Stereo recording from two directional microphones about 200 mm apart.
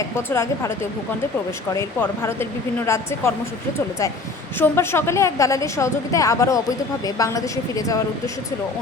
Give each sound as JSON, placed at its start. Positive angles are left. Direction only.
{"t": 0.2, "sound": "a woman's voice", "side_deg": 10}
{"t": 1.7, "sound": "a woman's voice", "side_deg": 15}
{"t": 4.6, "sound": "a woman's voice", "side_deg": 10}